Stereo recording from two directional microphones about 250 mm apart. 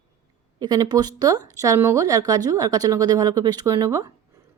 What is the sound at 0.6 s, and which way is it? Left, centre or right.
A woman's voice, centre.